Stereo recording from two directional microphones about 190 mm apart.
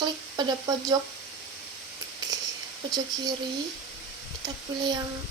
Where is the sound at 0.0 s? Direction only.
20° right (ahead or behind).